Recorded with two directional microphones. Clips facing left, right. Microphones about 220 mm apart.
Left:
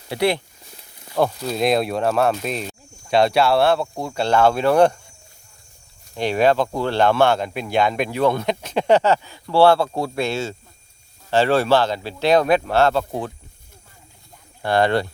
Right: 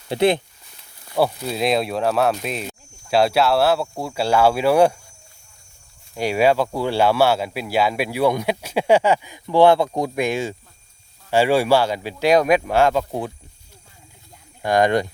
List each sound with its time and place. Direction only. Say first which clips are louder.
0.1 s speech: right 3 dB; 20° right (ahead or behind)
1.1 s speech: even; 5° right (ahead or behind)
6.1 s speech: even; 10° right (ahead or behind)
14.6 s speech: right 1 dB; 15° right (ahead or behind)